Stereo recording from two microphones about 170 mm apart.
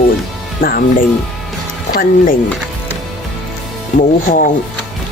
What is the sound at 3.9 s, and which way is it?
Speech, 50° left (ahead or behind).